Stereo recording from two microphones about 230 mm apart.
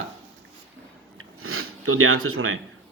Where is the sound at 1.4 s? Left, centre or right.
Right.